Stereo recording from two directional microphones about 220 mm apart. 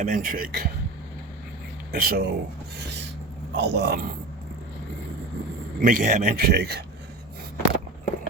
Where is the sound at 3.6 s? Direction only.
50° right (ahead or behind).